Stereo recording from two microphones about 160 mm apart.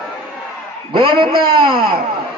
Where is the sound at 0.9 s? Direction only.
30° right (ahead or behind).